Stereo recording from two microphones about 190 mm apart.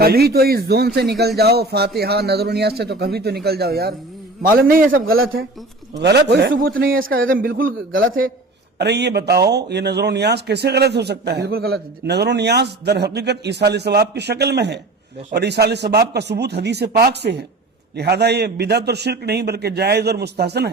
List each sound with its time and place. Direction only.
0.0 s a man's voice: 55° right (ahead or behind)
6.0 s a man's voice: 60° right (ahead or behind)
6.5 s a man's voice: 50° right (ahead or behind)
8.8 s a man's voice: 60° right (ahead or behind)